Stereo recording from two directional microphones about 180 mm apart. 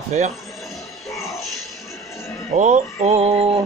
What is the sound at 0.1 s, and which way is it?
Speech, 40° right (ahead or behind).